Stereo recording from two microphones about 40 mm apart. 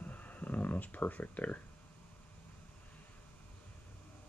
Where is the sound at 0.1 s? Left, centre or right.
Left.